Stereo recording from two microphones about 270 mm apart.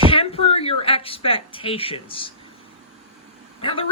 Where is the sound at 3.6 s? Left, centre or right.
Centre.